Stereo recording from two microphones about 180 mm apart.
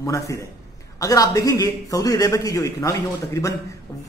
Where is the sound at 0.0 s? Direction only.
15° left (ahead or behind).